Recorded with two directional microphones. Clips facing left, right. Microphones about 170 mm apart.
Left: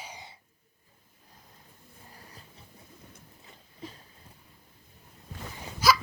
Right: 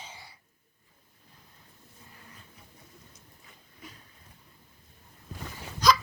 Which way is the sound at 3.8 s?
30° left (ahead or behind).